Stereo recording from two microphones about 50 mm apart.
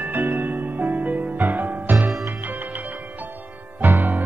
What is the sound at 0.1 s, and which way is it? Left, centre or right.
Music, right.